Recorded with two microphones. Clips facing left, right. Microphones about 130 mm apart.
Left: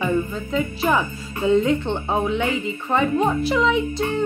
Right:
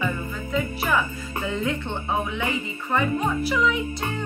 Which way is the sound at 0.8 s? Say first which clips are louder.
Left 4 dB; 25° left (ahead or behind).